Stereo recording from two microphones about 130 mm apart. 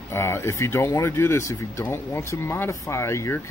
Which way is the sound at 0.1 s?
20° left (ahead or behind).